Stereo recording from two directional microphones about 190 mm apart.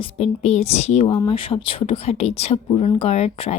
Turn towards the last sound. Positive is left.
turn(degrees=30)  # may be behind; listen again after turning